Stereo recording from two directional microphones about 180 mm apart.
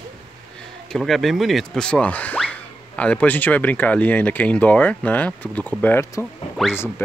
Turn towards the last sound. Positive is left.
turn(degrees=0)  # may be behind; listen again after turning